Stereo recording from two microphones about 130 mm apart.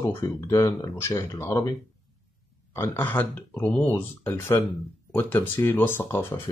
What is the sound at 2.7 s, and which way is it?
Speech, 15° left (ahead or behind).